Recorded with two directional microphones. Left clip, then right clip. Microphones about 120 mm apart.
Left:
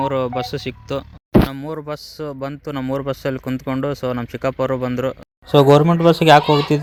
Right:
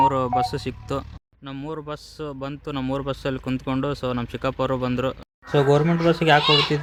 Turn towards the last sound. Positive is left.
turn(degrees=70)  # may be behind; listen again after turning